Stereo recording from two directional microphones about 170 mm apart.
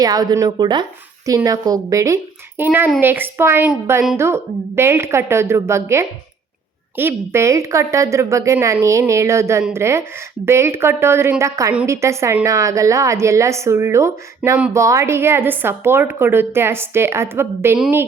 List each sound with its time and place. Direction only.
0.0 s a woman's voice: 20° right (ahead or behind)